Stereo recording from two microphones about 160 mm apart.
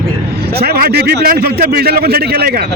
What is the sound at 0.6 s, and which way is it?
A man's voice, 80° right.